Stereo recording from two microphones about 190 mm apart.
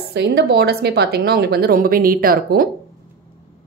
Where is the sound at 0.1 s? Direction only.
60° right (ahead or behind).